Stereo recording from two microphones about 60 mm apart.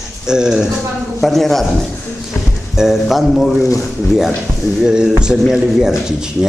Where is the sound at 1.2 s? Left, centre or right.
Centre.